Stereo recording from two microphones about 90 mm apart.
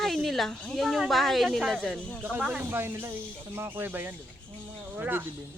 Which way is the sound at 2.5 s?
20° right (ahead or behind).